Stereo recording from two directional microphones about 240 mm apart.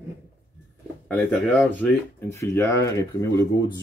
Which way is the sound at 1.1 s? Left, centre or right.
Centre.